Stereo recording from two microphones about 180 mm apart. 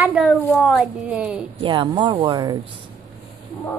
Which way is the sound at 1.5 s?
25° right (ahead or behind).